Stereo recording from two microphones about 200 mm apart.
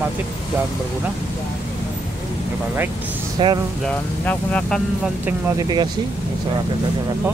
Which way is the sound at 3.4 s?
20° right (ahead or behind).